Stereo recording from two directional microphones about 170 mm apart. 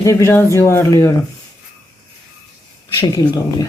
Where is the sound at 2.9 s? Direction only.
25° left (ahead or behind).